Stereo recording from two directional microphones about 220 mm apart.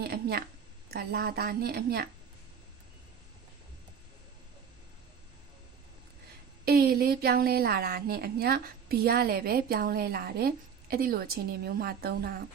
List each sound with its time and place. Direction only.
0.0 s a sound: 45° right (ahead or behind)
0.9 s a woman's voice: 45° right (ahead or behind)
6.7 s a woman's voice: 45° right (ahead or behind)